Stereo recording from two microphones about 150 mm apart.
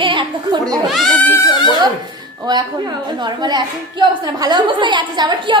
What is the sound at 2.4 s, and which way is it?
A woman's voice, 30° right (ahead or behind).